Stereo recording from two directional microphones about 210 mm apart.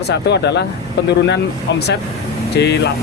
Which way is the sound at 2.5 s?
50° left (ahead or behind).